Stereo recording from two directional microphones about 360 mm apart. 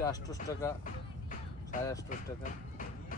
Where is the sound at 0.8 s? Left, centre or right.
Left.